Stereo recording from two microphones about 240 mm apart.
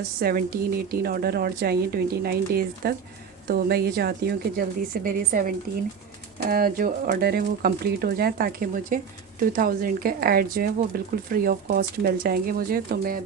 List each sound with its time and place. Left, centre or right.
0.2 s speech: right